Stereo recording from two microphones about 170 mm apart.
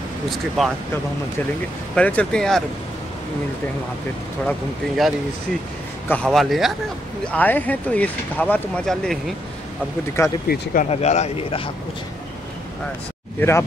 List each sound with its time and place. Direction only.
2.0 s speech: 5° left (ahead or behind)
4.5 s speech: centre (ahead or behind)
10.2 s speech: 20° left (ahead or behind)
10.5 s speech: 55° left (ahead or behind)
10.9 s speech: 40° left (ahead or behind)
13.4 s speech: 15° left (ahead or behind)